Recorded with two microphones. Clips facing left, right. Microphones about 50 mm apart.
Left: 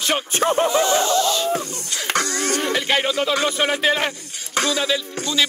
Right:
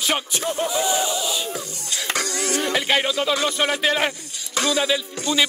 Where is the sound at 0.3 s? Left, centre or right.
Left.